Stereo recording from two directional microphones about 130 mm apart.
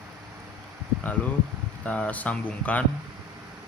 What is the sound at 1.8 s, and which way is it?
Speech, 10° left (ahead or behind).